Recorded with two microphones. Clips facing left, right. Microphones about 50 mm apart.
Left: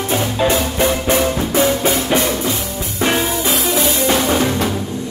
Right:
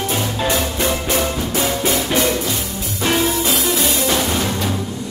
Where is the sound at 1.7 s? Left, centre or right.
Left.